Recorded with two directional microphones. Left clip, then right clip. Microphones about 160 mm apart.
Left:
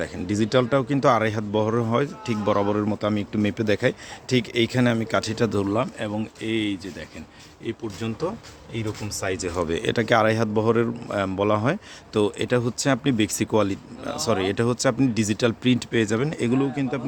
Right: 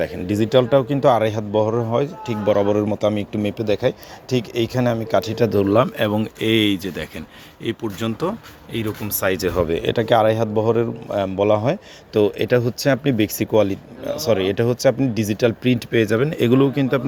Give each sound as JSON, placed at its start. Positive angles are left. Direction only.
{"t": 0.0, "sound": "speech", "side_deg": 0}
{"t": 3.6, "sound": "speech", "side_deg": 20}
{"t": 5.6, "sound": "speech", "side_deg": -25}
{"t": 6.0, "sound": "speech", "side_deg": -40}
{"t": 9.6, "sound": "speech", "side_deg": 5}
{"t": 16.6, "sound": "speech", "side_deg": -30}